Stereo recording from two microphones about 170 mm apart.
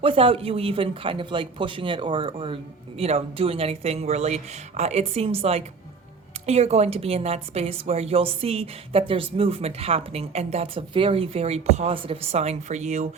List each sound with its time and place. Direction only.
0.0 s a woman's voice: 35° right (ahead or behind)